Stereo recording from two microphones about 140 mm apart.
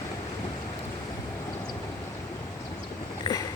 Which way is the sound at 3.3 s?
25° left (ahead or behind).